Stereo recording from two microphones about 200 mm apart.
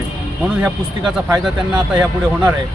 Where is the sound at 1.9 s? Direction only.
5° right (ahead or behind).